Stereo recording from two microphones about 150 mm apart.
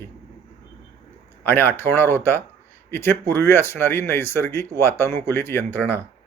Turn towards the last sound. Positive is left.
turn(degrees=15)  # may be behind; listen again after turning